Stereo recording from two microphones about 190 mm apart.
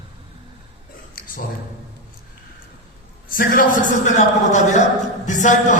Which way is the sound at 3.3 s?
45° left (ahead or behind).